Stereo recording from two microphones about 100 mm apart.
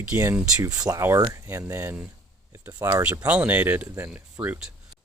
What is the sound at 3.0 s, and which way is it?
Speech, 15° right (ahead or behind).